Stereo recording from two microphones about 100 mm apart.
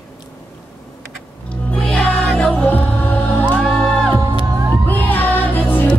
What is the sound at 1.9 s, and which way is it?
Music, centre (ahead or behind).